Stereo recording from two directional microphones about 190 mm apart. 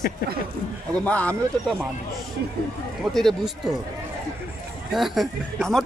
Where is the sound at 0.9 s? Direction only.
5° left (ahead or behind).